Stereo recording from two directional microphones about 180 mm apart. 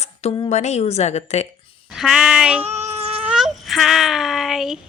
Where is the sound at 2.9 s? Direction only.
35° right (ahead or behind).